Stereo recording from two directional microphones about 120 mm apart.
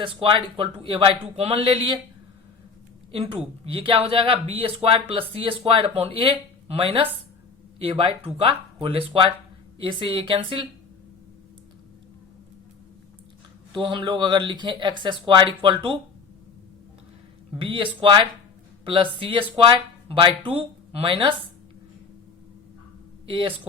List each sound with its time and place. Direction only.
0.0 s speech: 45° right (ahead or behind)
3.1 s speech: 55° right (ahead or behind)
13.8 s speech: 40° right (ahead or behind)
17.6 s speech: 45° right (ahead or behind)
23.2 s speech: 50° right (ahead or behind)